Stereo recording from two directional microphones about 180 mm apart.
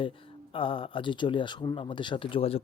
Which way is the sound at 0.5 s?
30° left (ahead or behind).